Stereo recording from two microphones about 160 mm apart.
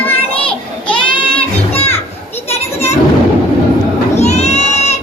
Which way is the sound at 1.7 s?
40° left (ahead or behind).